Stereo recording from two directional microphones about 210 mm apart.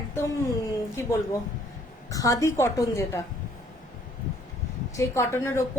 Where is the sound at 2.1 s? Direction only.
15° left (ahead or behind).